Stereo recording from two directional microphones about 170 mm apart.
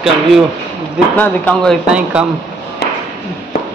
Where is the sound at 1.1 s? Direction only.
10° left (ahead or behind).